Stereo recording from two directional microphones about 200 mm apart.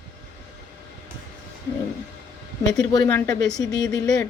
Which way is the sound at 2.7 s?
20° left (ahead or behind).